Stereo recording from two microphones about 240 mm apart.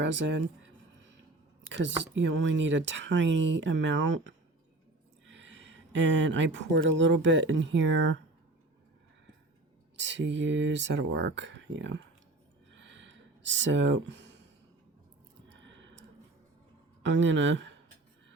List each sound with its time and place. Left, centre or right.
0.0 s speech: right
2.1 s speech: right
10.0 s speech: right
12.7 s a sound: right
15.4 s a sound: right
17.0 s speech: right